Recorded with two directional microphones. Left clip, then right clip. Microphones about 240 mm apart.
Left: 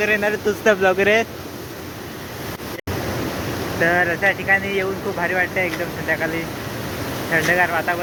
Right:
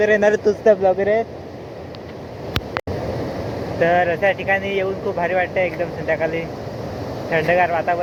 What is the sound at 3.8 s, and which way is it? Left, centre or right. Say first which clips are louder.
Speech: right 1 dB; left.